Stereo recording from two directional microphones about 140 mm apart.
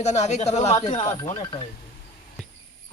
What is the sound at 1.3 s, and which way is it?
Speech, 35° left (ahead or behind).